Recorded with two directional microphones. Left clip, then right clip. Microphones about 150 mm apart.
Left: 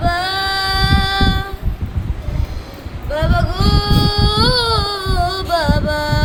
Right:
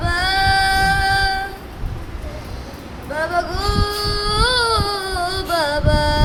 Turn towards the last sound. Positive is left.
turn(degrees=5)  # may be behind; listen again after turning